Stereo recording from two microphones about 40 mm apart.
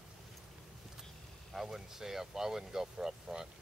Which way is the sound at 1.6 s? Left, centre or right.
Centre.